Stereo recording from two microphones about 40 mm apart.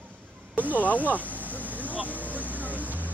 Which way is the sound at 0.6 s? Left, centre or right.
Left.